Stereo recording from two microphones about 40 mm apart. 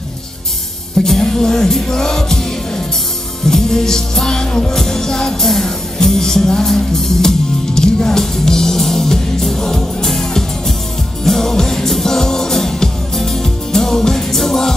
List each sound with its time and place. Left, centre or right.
1.0 s music: centre
3.4 s music: centre